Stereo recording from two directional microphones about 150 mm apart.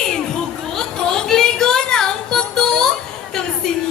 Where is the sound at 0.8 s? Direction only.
5° left (ahead or behind).